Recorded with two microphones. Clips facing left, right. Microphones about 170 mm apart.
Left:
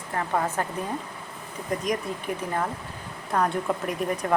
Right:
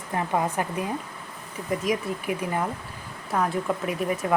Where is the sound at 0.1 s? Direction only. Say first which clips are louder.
Right 1 dB; 15° right (ahead or behind).